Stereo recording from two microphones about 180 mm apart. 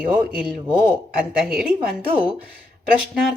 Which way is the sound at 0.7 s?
25° right (ahead or behind).